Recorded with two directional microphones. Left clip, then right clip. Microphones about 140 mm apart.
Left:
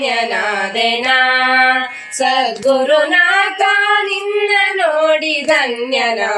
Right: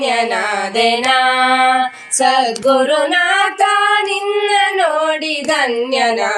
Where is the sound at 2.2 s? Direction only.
40° right (ahead or behind).